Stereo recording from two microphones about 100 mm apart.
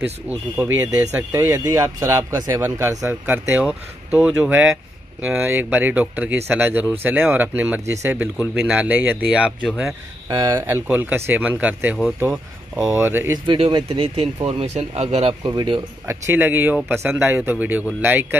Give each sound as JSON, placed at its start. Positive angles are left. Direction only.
{"t": 0.3, "sound": "speech", "side_deg": -20}
{"t": 1.5, "sound": "a man's voice", "side_deg": -35}
{"t": 7.8, "sound": "speech", "side_deg": -30}
{"t": 8.1, "sound": "speech", "side_deg": -15}
{"t": 10.2, "sound": "speech", "side_deg": -35}
{"t": 13.5, "sound": "speech", "side_deg": -50}
{"t": 13.9, "sound": "speech", "side_deg": -70}
{"t": 14.2, "sound": "speech", "side_deg": -60}
{"t": 15.4, "sound": "speech", "side_deg": -50}
{"t": 16.1, "sound": "speech", "side_deg": -20}